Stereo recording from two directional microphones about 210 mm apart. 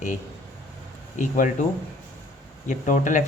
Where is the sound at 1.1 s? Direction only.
35° left (ahead or behind).